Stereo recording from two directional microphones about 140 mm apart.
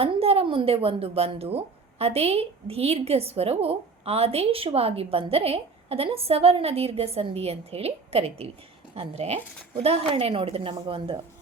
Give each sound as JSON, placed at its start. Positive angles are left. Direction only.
{"t": 0.0, "sound": "a woman's voice", "side_deg": -45}